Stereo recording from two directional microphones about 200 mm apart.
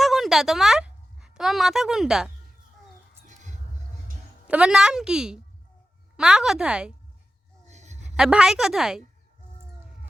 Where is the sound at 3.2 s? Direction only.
35° right (ahead or behind).